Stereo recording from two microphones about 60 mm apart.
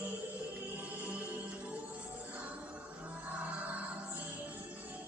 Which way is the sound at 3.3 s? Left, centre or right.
Right.